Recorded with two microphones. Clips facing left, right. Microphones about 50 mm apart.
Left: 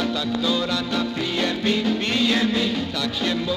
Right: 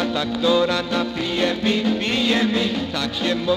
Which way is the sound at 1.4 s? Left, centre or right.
Centre.